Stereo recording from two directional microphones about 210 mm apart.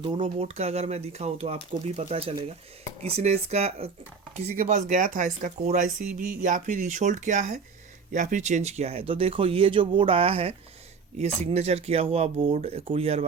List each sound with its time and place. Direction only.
0.0 s speech: 25° right (ahead or behind)